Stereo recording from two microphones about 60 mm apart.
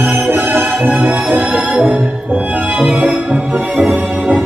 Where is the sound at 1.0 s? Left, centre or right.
Right.